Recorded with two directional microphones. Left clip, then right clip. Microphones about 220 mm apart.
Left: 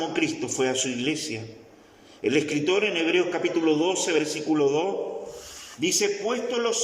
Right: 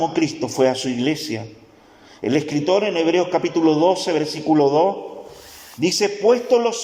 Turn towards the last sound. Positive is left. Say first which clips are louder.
# right 10 dB
turn(degrees=-25)  # may be behind; listen again after turning